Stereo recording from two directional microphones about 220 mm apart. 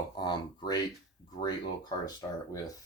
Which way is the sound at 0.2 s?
20° left (ahead or behind).